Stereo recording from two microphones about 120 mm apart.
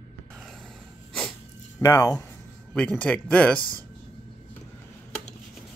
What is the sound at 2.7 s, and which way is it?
Speech, 10° left (ahead or behind).